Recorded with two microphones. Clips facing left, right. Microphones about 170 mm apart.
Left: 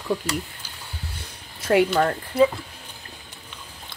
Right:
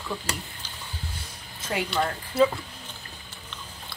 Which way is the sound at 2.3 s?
10° left (ahead or behind).